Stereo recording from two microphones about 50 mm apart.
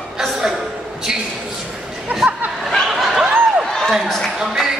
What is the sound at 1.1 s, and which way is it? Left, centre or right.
Speech, centre.